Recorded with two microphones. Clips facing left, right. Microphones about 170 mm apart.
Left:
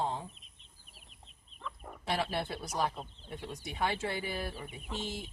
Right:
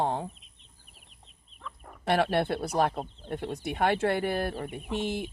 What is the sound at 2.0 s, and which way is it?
Speech, 60° right (ahead or behind).